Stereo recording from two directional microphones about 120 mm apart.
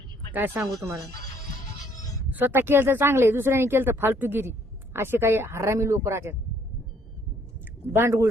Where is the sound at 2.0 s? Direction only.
30° left (ahead or behind).